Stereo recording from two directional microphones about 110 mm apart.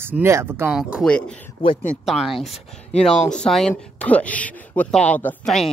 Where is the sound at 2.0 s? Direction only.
5° right (ahead or behind).